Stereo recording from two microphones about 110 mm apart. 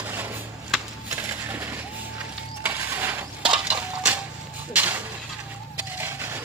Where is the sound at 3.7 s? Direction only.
15° right (ahead or behind).